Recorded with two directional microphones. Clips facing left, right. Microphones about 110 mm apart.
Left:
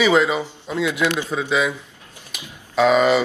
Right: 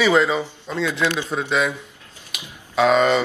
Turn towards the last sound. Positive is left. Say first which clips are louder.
# left 1 dB
turn(degrees=5)  # may be behind; listen again after turning